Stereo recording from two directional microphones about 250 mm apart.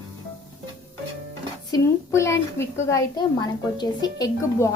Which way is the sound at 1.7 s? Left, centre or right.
Centre.